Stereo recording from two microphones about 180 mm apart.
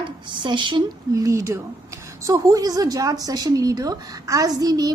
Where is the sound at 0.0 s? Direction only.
25° right (ahead or behind).